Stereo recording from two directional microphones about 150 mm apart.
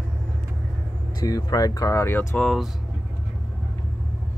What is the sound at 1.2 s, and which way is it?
Speech, 25° left (ahead or behind).